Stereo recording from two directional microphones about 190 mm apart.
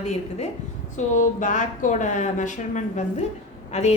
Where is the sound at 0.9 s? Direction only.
40° left (ahead or behind).